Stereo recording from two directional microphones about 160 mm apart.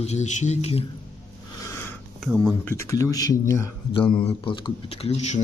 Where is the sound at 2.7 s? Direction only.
20° left (ahead or behind).